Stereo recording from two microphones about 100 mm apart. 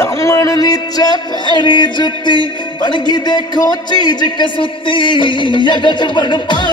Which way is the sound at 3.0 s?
45° left (ahead or behind).